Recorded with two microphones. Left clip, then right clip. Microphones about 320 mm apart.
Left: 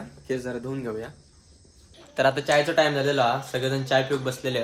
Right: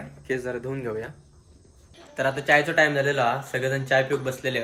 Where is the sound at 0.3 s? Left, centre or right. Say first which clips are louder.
Right 1 dB; centre.